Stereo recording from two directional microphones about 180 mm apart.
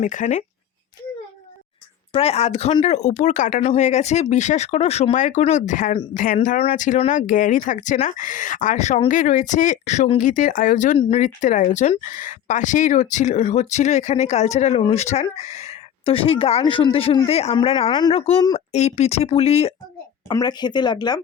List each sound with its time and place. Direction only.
0.0 s speech: 45° left (ahead or behind)
2.1 s speech: 35° left (ahead or behind)
10.9 s speech: 30° left (ahead or behind)
20.2 s speech: 20° left (ahead or behind)